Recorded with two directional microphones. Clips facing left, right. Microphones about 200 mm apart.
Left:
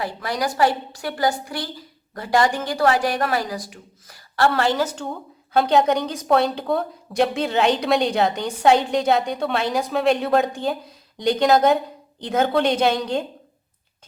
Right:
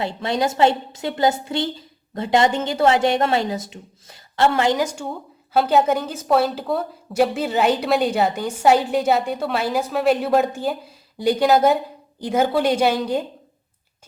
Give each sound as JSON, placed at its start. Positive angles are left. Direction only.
{"t": 0.0, "sound": "a woman's voice", "side_deg": -25}